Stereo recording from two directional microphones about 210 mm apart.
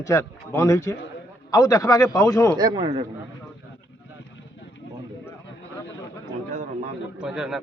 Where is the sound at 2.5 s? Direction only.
20° right (ahead or behind).